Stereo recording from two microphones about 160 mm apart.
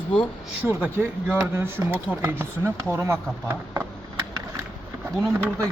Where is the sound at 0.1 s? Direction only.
5° left (ahead or behind).